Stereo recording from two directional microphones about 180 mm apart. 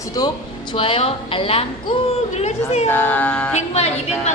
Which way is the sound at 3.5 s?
35° left (ahead or behind).